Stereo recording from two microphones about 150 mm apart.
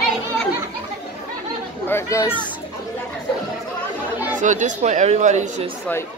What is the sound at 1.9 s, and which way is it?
Speech, 20° left (ahead or behind).